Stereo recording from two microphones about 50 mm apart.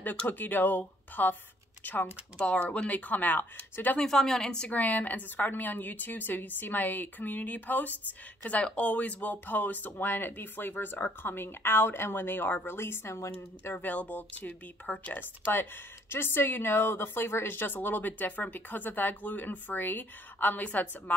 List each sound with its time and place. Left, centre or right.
0.3 s a woman's voice: left
2.4 s a woman's voice: left
4.0 s a woman's voice: centre
4.6 s a woman's voice: left
13.7 s a woman's voice: left
16.1 s speech: left